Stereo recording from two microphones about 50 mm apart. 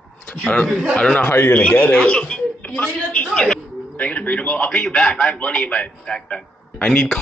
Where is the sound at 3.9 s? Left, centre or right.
Left.